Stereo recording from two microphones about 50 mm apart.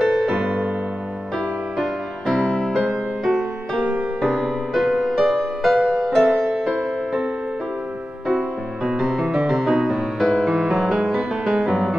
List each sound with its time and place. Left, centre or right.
0.0 s music: centre
1.8 s music: centre
2.7 s music: centre
8.8 s music: centre
10.1 s music: centre